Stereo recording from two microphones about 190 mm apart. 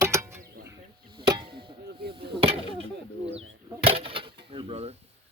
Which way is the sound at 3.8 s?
30° right (ahead or behind).